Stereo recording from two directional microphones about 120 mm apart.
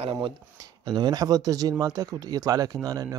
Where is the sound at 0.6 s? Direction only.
35° right (ahead or behind).